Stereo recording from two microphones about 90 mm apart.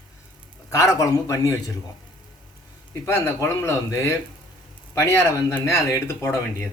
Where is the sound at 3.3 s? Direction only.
30° left (ahead or behind).